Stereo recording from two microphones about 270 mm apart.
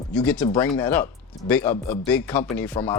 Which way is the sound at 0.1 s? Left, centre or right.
Centre.